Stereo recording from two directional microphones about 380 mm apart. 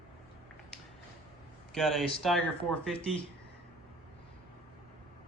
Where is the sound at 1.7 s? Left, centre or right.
Centre.